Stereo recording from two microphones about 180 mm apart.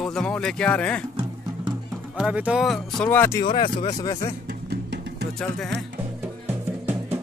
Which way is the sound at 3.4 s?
30° left (ahead or behind).